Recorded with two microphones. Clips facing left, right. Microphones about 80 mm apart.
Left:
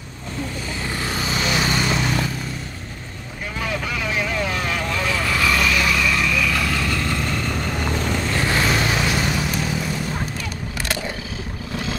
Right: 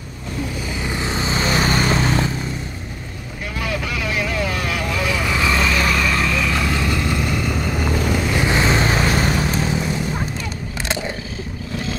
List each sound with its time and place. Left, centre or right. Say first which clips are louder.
0.8 s vehicle: right 2 dB; right
3.5 s vehicle: right 1 dB; centre; by 9.8 s right